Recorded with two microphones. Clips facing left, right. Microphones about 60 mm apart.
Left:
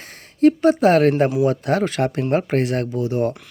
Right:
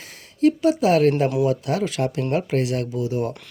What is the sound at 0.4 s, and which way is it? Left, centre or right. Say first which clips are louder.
Speech: left 4 dB; left.